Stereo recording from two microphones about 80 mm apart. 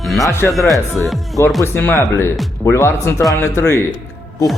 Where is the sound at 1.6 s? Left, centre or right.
Left.